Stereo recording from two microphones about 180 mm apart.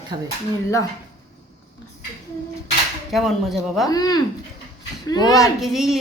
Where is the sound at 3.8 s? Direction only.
20° left (ahead or behind).